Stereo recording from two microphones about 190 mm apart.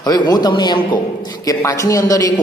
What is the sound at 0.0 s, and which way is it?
A man's voice, 20° left (ahead or behind).